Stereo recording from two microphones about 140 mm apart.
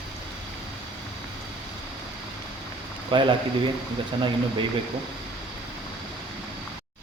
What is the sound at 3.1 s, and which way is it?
Speech, 35° right (ahead or behind).